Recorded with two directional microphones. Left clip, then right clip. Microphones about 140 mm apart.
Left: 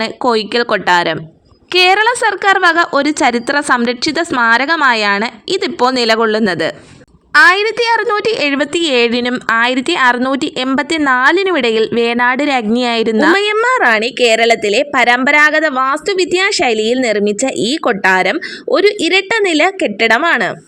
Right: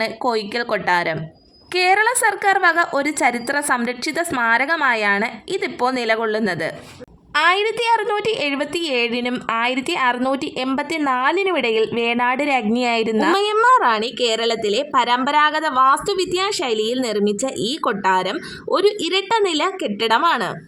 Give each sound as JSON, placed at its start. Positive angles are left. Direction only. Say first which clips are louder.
{"t": 0.0, "sound": "a woman's voice", "louder": "left 6 dB", "side_deg": 30}